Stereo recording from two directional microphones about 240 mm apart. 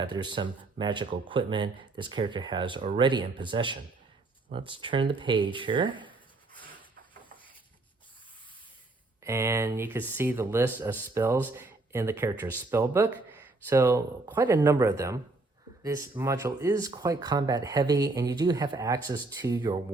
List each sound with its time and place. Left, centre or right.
0.0 s speech: centre
9.2 s speech: centre